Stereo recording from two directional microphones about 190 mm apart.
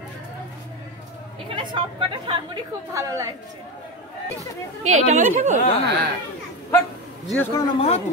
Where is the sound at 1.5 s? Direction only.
25° right (ahead or behind).